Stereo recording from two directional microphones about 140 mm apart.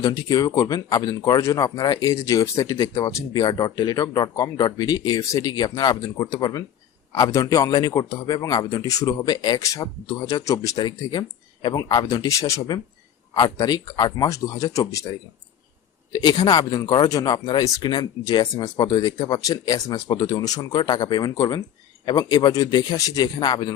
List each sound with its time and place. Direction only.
0.0 s speech: 25° left (ahead or behind)
16.1 s speech: 30° left (ahead or behind)